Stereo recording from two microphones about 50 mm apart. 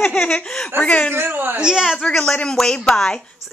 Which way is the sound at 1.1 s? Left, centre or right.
Right.